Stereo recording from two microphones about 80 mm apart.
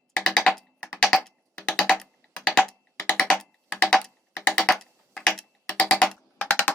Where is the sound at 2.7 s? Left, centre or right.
Centre.